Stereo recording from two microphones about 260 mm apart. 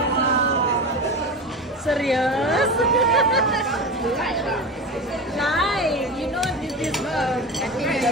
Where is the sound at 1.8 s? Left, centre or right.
Centre.